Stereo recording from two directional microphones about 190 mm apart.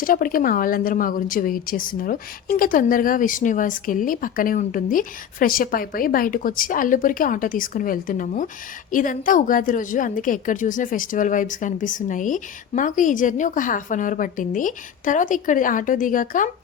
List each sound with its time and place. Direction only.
0.0 s a woman's voice: 50° left (ahead or behind)